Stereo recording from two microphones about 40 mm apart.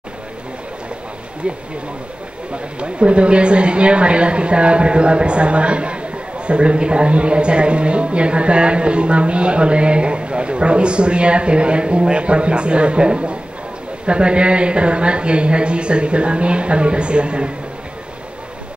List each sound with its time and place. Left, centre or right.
1.4 s speech: right